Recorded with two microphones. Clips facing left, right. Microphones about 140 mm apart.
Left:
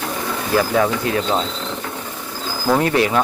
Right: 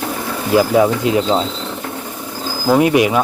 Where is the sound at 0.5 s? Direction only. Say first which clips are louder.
Right 5 dB; 15° right (ahead or behind).